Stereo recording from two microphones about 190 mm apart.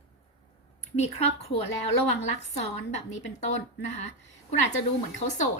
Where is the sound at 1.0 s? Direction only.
35° left (ahead or behind).